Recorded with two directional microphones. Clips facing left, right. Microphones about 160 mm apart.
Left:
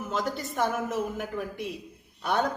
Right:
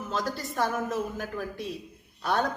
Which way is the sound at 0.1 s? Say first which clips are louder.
Left 1 dB; 20° left (ahead or behind).